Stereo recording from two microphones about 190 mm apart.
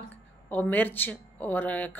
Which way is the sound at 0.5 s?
10° left (ahead or behind).